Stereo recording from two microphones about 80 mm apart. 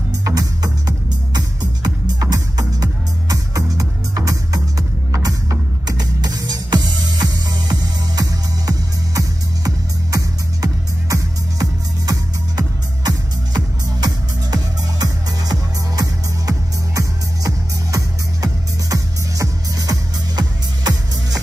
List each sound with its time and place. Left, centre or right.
0.2 s music: right